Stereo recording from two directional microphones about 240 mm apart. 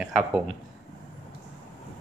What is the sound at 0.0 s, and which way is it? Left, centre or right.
Speech, centre.